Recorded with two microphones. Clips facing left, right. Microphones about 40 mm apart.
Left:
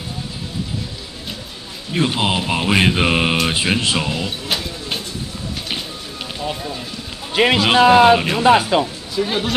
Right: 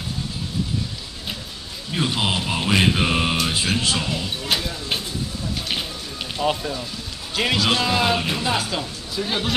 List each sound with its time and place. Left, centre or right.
2.0 s a man's voice: centre
4.5 s a sound: centre
6.4 s speech: centre
7.3 s a man's voice: left
9.2 s speech: centre